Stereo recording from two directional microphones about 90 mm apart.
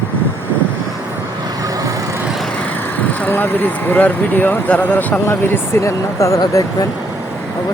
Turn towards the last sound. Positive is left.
turn(degrees=40)  # may be behind; listen again after turning